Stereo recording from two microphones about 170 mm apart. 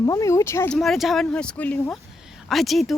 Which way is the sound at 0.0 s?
20° left (ahead or behind).